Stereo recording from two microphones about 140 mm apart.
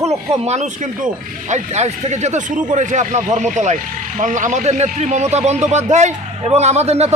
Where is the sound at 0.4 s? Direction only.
55° right (ahead or behind).